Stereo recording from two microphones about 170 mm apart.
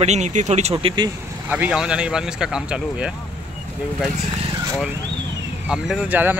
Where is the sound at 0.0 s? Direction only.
45° right (ahead or behind).